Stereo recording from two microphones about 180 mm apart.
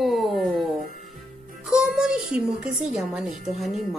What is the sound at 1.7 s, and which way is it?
A woman's voice, 5° right (ahead or behind).